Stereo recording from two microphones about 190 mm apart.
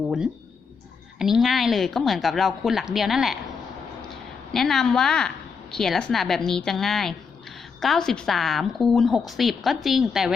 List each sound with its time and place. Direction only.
1.2 s a woman's voice: centre (ahead or behind)